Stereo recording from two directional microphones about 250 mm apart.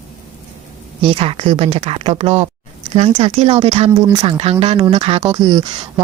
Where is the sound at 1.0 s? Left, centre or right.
Right.